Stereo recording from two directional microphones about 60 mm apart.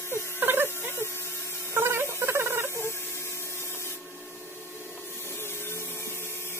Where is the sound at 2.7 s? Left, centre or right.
Left.